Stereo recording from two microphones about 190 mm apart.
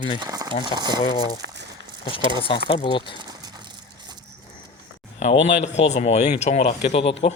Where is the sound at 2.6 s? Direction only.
25° left (ahead or behind).